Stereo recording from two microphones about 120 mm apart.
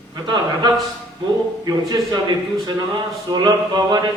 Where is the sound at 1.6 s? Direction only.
40° right (ahead or behind).